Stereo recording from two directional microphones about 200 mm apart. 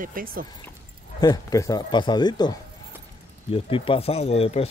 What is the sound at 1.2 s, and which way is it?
Speech, 20° left (ahead or behind).